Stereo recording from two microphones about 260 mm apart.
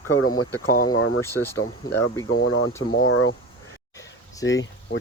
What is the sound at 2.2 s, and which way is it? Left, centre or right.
Speech, left.